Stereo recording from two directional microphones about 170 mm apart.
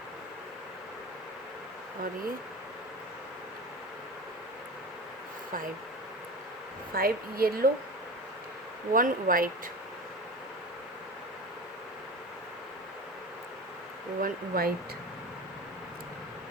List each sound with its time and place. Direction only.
6.9 s a woman's voice: 60° right (ahead or behind)
8.9 s speech: 55° right (ahead or behind)
14.2 s a woman's voice: 60° right (ahead or behind)